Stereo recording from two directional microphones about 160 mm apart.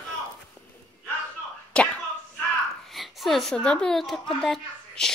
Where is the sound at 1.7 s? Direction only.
5° left (ahead or behind).